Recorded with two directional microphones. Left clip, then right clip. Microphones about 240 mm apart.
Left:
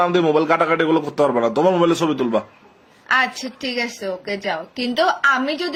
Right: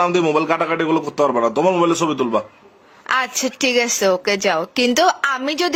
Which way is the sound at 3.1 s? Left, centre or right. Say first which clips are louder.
Left 1 dB; right.